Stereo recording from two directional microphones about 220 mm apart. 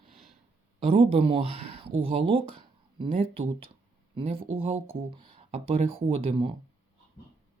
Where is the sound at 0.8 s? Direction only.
25° right (ahead or behind).